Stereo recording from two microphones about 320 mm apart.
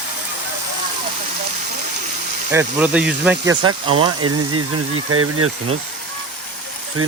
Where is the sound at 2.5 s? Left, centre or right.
Centre.